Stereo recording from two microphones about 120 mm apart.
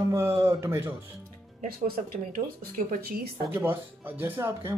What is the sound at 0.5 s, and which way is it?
Speech, 20° right (ahead or behind).